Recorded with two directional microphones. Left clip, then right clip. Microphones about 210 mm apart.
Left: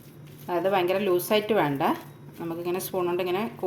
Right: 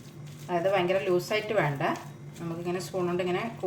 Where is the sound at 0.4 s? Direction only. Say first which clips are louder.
Left 2 dB; 45° left (ahead or behind).